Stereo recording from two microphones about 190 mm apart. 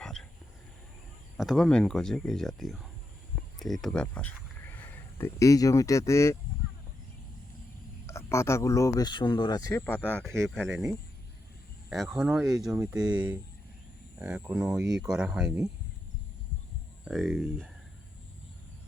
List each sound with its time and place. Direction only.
0.0 s a sound: 5° left (ahead or behind)
1.4 s speech: centre (ahead or behind)
8.0 s speech: 15° left (ahead or behind)
9.8 s speech: 10° left (ahead or behind)
11.9 s speech: centre (ahead or behind)
17.1 s speech: centre (ahead or behind)